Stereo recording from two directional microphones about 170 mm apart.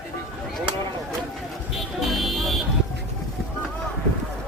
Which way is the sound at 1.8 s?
Centre (ahead or behind).